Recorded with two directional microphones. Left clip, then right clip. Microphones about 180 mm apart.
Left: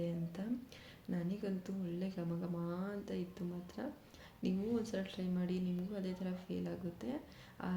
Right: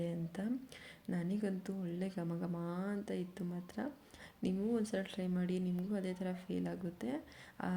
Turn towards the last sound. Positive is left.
turn(degrees=-45)  # may be behind; listen again after turning